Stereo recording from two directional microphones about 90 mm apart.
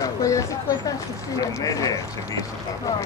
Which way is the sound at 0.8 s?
40° left (ahead or behind).